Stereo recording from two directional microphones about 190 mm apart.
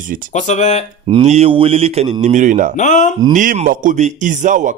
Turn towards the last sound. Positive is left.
turn(degrees=-40)  # may be behind; listen again after turning